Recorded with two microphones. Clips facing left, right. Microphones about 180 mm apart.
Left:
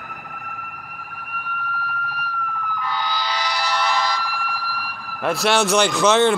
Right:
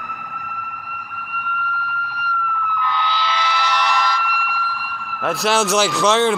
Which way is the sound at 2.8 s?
40° left (ahead or behind).